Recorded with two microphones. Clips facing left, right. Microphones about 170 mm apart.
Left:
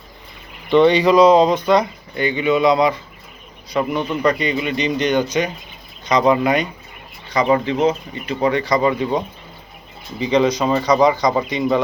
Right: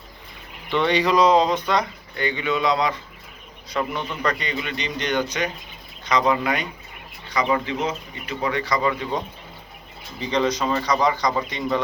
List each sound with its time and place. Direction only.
0.7 s speech: 15° left (ahead or behind)
7.3 s speech: 30° left (ahead or behind)
10.2 s speech: 15° left (ahead or behind)